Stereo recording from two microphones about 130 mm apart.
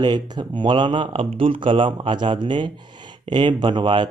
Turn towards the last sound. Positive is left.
turn(degrees=-40)  # may be behind; listen again after turning